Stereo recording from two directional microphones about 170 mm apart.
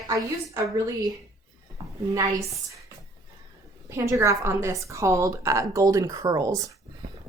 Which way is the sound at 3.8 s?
15° right (ahead or behind).